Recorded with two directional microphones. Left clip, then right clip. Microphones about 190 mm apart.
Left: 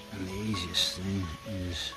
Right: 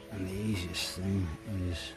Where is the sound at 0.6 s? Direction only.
25° right (ahead or behind).